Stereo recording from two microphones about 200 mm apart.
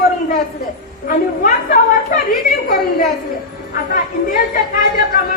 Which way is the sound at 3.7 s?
45° left (ahead or behind).